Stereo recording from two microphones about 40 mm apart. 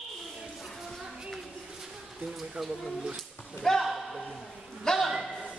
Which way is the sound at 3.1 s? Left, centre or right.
Centre.